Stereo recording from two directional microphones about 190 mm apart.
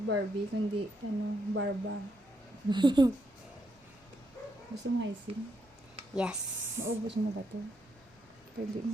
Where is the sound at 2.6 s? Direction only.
25° right (ahead or behind).